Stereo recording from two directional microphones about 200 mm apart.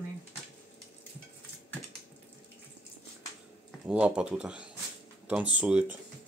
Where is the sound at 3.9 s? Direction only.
5° right (ahead or behind).